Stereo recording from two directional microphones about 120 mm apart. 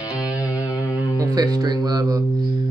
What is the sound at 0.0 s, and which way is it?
Music, 30° left (ahead or behind).